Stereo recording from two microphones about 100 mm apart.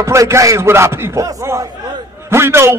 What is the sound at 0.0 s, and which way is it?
A man's voice, 30° right (ahead or behind).